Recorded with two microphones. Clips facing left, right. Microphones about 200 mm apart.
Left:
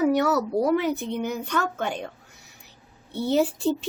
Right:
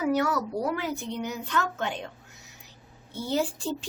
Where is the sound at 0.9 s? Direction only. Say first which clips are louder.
Left 5 dB; 20° left (ahead or behind).